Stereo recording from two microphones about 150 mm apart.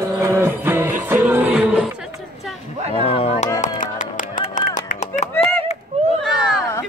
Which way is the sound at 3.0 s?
40° left (ahead or behind).